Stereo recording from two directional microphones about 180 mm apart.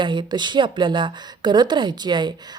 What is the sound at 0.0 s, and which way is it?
A woman's voice, 25° right (ahead or behind).